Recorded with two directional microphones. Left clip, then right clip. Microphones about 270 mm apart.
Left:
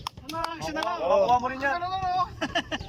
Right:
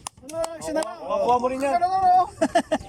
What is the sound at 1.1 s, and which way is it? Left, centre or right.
Speech, centre.